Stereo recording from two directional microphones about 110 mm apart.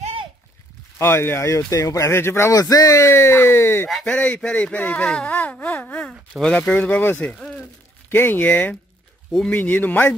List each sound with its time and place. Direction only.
0.9 s speech: 25° left (ahead or behind)
2.5 s speech: 35° left (ahead or behind); by 5.0 s 15° left (ahead or behind)
5.0 s wail: 10° left (ahead or behind)
6.4 s speech: 10° left (ahead or behind)
7.3 s a sound: 5° left (ahead or behind)
8.1 s speech: 20° left (ahead or behind)
9.6 s speech: 15° left (ahead or behind)